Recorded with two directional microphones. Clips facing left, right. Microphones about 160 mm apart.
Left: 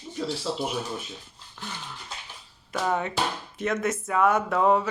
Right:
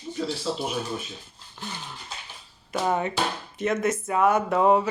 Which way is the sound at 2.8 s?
5° right (ahead or behind).